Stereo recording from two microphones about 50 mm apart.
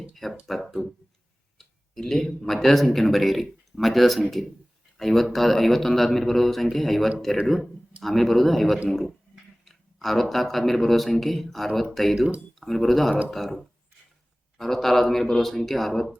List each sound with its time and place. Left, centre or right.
0.1 s speech: centre